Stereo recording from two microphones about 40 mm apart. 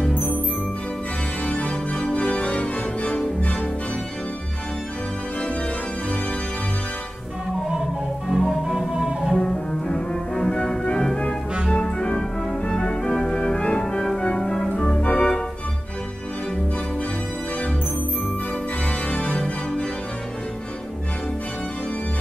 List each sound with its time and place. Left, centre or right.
1.4 s organ: left
8.3 s music: centre
9.4 s music: centre
15.1 s organ: centre
19.0 s organ: left